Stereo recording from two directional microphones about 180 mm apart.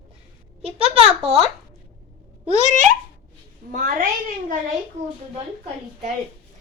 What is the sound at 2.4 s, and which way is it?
A woman's voice, 40° right (ahead or behind).